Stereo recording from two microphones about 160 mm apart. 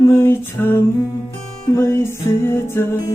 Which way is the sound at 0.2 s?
15° left (ahead or behind).